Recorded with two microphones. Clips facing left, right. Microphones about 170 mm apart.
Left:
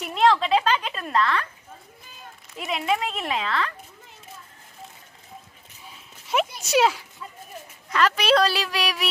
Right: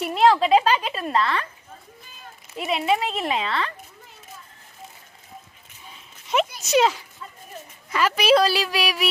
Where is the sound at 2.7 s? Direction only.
30° right (ahead or behind).